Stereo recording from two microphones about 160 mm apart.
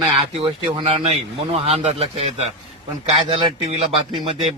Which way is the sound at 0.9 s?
40° right (ahead or behind).